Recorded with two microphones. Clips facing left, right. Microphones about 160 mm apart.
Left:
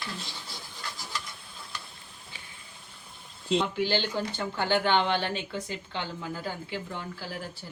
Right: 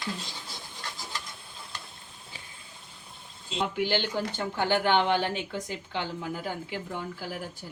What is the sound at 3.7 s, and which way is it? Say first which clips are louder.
Speech: even; 15° right (ahead or behind).